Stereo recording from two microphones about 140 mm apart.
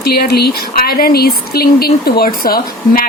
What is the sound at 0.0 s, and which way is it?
Speech, 90° left.